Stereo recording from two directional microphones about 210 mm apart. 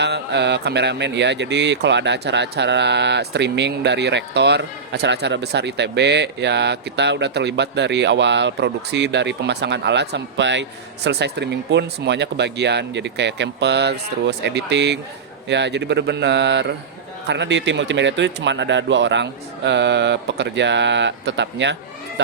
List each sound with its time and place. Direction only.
0.0 s speech: 55° right (ahead or behind)